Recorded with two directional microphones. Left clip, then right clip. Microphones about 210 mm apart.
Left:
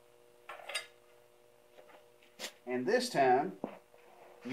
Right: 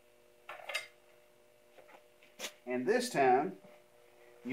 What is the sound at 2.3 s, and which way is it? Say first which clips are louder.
Speech: even; 10° left (ahead or behind).